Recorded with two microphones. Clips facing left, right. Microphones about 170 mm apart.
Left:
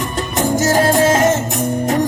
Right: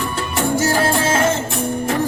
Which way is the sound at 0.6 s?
20° left (ahead or behind).